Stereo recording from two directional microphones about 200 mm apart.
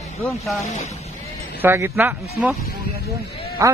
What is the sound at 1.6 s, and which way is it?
Speech, 10° right (ahead or behind).